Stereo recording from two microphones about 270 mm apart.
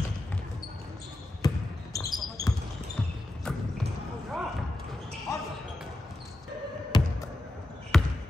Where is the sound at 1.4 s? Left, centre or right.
Centre.